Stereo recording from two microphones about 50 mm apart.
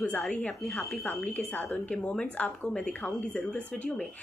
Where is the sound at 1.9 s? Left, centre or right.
Left.